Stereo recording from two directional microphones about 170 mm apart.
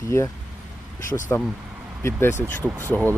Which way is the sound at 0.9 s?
50° left (ahead or behind).